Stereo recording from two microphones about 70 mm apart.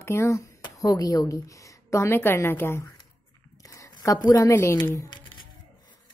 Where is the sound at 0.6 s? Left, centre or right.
Left.